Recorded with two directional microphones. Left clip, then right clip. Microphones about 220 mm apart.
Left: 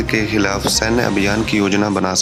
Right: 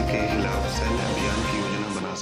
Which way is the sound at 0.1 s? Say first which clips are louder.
Left 11 dB; 40° left (ahead or behind).